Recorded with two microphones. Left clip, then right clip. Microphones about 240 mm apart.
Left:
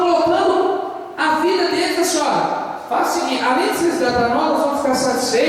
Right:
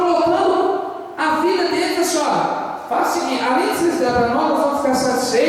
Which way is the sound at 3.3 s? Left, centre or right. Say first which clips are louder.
Left 1 dB; centre.